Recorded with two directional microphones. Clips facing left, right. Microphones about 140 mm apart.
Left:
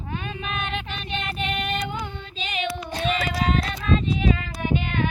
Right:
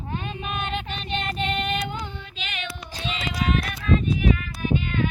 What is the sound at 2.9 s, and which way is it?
Music, 50° left (ahead or behind).